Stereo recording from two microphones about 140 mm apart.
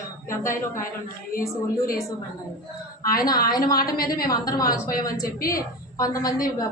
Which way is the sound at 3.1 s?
25° left (ahead or behind).